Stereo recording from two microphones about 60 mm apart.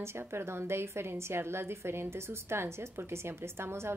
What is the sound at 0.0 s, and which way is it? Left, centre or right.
A woman's voice, right.